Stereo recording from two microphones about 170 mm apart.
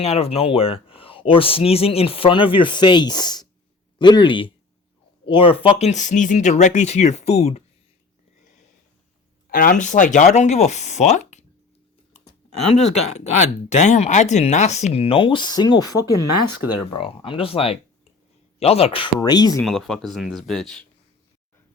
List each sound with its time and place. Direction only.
0.0 s speech: 35° left (ahead or behind)
9.5 s speech: 50° left (ahead or behind)
12.7 s speech: 35° left (ahead or behind)
19.6 s speech: centre (ahead or behind)